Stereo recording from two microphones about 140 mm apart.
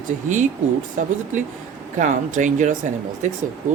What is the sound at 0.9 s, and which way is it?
Speech, 60° right (ahead or behind).